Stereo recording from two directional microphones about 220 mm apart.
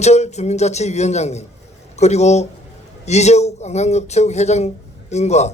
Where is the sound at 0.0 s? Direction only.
30° left (ahead or behind).